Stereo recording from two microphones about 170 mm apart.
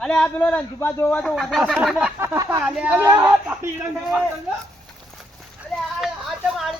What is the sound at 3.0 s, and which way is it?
Speech, 25° right (ahead or behind).